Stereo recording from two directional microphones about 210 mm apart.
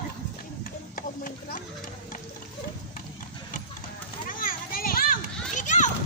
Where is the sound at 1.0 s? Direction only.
40° left (ahead or behind).